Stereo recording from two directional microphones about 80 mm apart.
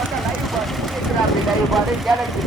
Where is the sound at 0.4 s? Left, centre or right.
Centre.